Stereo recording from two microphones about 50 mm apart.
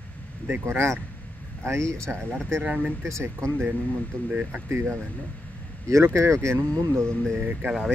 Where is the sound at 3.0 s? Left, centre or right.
Right.